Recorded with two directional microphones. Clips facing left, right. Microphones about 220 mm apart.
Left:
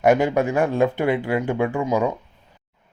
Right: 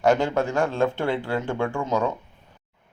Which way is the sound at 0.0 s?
15° left (ahead or behind).